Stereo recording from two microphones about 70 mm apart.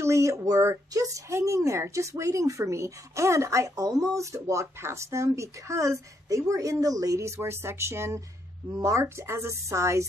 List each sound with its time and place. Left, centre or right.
0.0 s speech: right
4.1 s speech: right
7.2 s speech: right